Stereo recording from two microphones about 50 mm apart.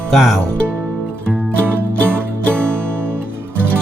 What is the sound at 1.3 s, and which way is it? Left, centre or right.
Music, right.